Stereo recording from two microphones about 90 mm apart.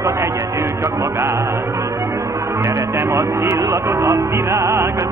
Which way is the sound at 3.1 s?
35° right (ahead or behind).